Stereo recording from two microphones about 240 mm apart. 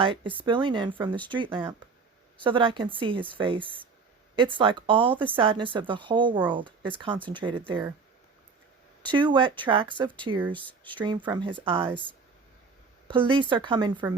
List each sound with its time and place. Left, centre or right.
0.0 s speech: right
9.1 s speech: centre
10.6 s speech: centre
10.9 s speech: centre
13.1 s speech: centre